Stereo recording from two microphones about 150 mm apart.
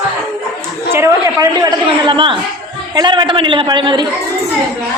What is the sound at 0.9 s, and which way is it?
A woman's voice, 20° right (ahead or behind).